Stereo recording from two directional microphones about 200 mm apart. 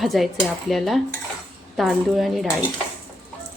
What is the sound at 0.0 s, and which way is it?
Speech, centre (ahead or behind).